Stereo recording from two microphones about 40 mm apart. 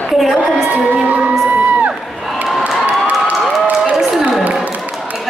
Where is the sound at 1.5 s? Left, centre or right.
Right.